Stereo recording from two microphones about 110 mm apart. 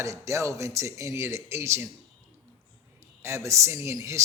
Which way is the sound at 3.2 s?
25° right (ahead or behind).